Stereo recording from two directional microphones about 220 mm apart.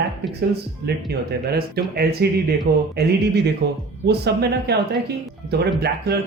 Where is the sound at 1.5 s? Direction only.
45° right (ahead or behind).